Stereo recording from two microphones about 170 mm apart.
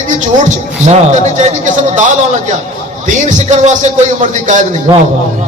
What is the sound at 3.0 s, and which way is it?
A man's voice, 45° right (ahead or behind).